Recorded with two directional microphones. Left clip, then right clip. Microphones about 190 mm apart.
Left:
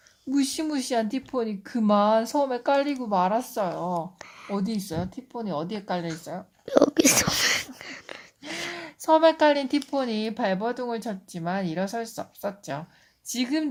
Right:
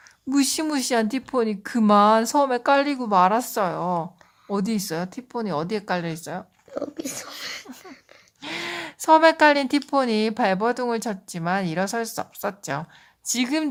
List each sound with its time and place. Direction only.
0.3 s speech: 35° right (ahead or behind)
6.7 s a sound: 45° left (ahead or behind)
8.4 s speech: 35° right (ahead or behind)